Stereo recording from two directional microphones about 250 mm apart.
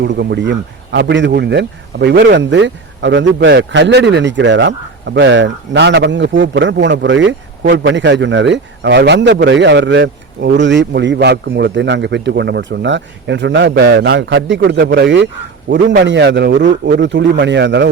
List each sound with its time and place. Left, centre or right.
0.0 s a man's voice: right